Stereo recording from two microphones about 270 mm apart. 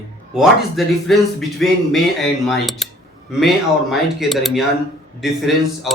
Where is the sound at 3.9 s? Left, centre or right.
Centre.